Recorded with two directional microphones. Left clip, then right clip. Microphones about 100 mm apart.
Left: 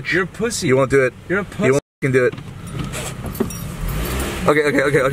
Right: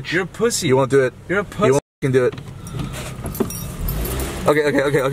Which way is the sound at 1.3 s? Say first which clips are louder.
Right 3 dB; 55° right (ahead or behind).